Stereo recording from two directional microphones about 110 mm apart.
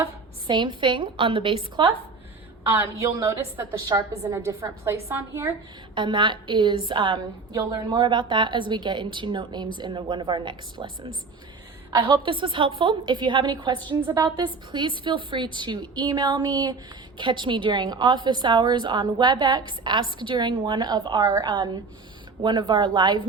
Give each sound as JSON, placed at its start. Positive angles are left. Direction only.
{"t": 0.4, "sound": "a woman's voice", "side_deg": -45}
{"t": 2.6, "sound": "a woman's voice", "side_deg": -20}
{"t": 3.8, "sound": "speech", "side_deg": -35}
{"t": 4.3, "sound": "a woman's voice", "side_deg": -20}
{"t": 5.9, "sound": "a woman's voice", "side_deg": -45}
{"t": 7.5, "sound": "a woman's voice", "side_deg": -35}
{"t": 12.0, "sound": "a woman's voice", "side_deg": -50}